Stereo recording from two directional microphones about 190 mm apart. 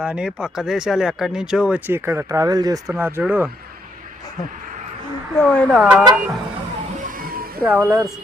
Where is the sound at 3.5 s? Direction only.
50° right (ahead or behind).